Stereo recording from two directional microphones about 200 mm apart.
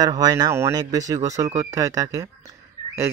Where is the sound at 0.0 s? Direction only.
20° right (ahead or behind).